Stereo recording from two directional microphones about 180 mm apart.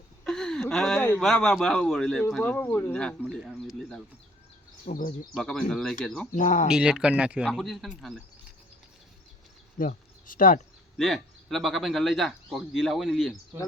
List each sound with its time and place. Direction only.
0.3 s speech: 5° left (ahead or behind)
3.2 s speech: 5° right (ahead or behind)
4.9 s speech: 45° left (ahead or behind)
5.3 s speech: 5° left (ahead or behind)
6.3 s speech: 45° left (ahead or behind)
6.7 s speech: 5° right (ahead or behind)
9.7 s speech: 50° left (ahead or behind)
10.9 s speech: centre (ahead or behind)